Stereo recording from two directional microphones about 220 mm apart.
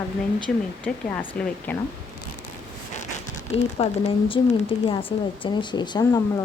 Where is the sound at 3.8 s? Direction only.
30° left (ahead or behind).